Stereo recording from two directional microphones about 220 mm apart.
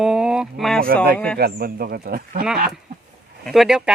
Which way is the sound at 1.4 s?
45° right (ahead or behind).